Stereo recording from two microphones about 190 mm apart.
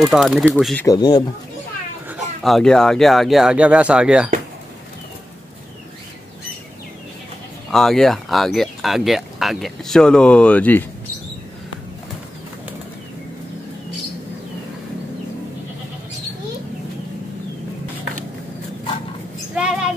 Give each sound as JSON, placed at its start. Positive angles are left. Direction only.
{"t": 0.1, "sound": "speech", "side_deg": 0}
{"t": 0.8, "sound": "speech", "side_deg": 20}
{"t": 2.0, "sound": "speech", "side_deg": 0}
{"t": 7.7, "sound": "speech", "side_deg": 0}
{"t": 19.5, "sound": "a sound", "side_deg": -5}